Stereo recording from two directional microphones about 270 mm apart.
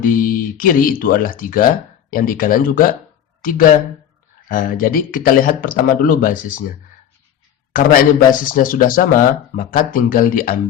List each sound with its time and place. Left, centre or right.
0.0 s speech: left
4.4 s speech: left